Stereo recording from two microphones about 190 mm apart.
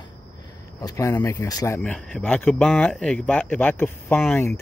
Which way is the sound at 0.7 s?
15° left (ahead or behind).